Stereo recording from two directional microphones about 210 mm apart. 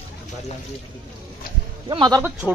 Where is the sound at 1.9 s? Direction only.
20° right (ahead or behind).